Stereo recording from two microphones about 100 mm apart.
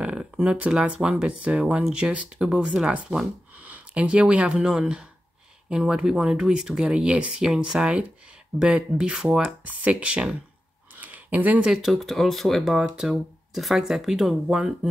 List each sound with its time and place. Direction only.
0.0 s speech: 10° right (ahead or behind)
9.7 s speech: 15° right (ahead or behind)
11.0 s a sound: 15° right (ahead or behind)
11.7 s speech: centre (ahead or behind)